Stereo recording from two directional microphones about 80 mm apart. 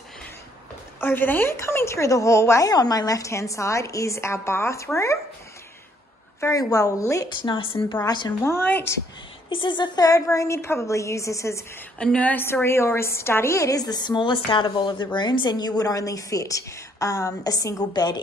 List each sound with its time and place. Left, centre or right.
1.0 s a woman's voice: left
2.7 s a woman's voice: left
6.6 s a woman's voice: left
7.4 s a woman's voice: left
8.4 s a woman's voice: left
9.5 s a woman's voice: left
10.0 s a woman's voice: left
12.0 s a woman's voice: centre
12.6 s a woman's voice: left